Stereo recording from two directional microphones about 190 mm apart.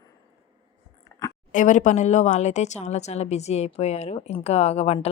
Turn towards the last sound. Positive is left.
turn(degrees=30)  # may be behind; listen again after turning